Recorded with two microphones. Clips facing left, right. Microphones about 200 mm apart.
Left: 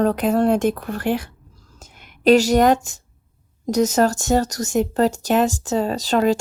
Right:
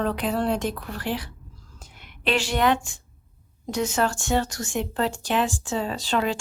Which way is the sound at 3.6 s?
40° left (ahead or behind).